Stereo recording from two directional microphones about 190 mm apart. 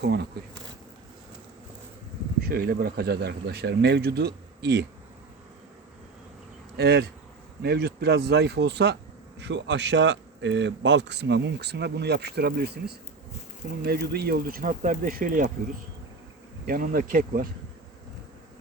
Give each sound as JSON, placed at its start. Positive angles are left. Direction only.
{"t": 0.0, "sound": "a man's voice", "side_deg": -60}
{"t": 2.4, "sound": "a man's voice", "side_deg": -50}
{"t": 6.7, "sound": "a man's voice", "side_deg": -65}
{"t": 16.6, "sound": "speech", "side_deg": -45}